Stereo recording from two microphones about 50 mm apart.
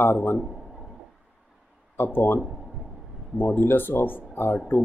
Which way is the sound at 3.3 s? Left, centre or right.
Left.